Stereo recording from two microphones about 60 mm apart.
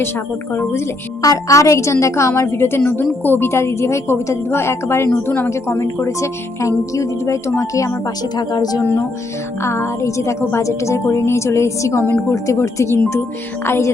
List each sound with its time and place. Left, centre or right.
0.5 s a woman's voice: left
1.2 s a woman's voice: left
3.5 s a woman's voice: left
5.1 s a woman's voice: left
5.5 s a woman's voice: left
8.4 s speech: left
8.8 s a woman's voice: left
9.6 s a woman's voice: left
13.7 s a woman's voice: left